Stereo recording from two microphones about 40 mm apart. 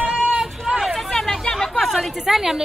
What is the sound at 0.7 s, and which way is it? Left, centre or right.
Hubbub, centre.